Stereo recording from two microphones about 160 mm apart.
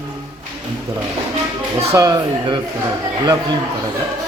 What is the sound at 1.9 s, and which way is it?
Speech, 20° right (ahead or behind).